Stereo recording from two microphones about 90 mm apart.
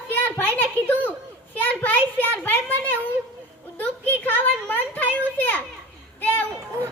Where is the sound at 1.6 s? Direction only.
20° left (ahead or behind).